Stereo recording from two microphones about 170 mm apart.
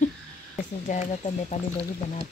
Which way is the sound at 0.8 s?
45° left (ahead or behind).